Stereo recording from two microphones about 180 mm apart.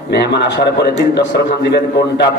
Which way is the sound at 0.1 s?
70° left (ahead or behind).